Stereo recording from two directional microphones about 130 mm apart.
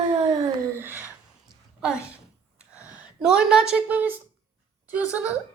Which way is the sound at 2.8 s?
10° right (ahead or behind).